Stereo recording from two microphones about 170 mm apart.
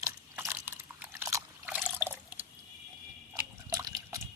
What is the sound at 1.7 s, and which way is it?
Water, 5° right (ahead or behind).